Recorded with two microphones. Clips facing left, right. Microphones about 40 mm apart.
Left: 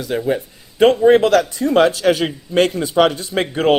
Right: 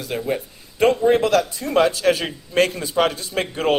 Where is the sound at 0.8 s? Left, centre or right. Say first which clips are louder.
Left 5 dB; left.